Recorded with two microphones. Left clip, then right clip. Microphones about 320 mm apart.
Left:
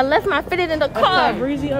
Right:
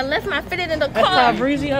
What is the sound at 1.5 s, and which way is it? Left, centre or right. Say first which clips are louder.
Speech: right 2 dB; right.